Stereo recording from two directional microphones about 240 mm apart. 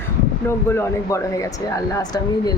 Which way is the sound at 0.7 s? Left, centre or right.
Centre.